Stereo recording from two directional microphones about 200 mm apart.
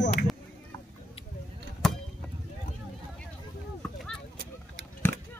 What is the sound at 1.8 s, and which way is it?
Vehicle, 5° left (ahead or behind).